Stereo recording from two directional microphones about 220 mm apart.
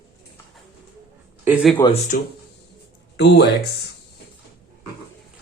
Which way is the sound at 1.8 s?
20° left (ahead or behind).